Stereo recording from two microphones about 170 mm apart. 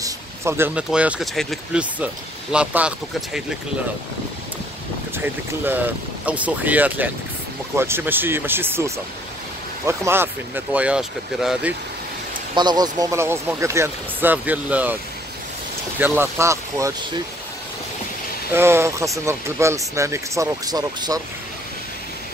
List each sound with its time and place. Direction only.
0.0 s speech: 15° right (ahead or behind)
5.1 s speech: 10° right (ahead or behind)
12.5 s speech: 25° right (ahead or behind); by 15.0 s 10° right (ahead or behind)
16.0 s speech: 15° right (ahead or behind)
18.5 s speech: 15° right (ahead or behind)